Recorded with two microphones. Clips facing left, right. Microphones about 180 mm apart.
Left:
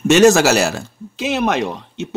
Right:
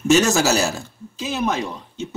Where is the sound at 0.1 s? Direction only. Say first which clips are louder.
Left 6 dB; 75° left (ahead or behind).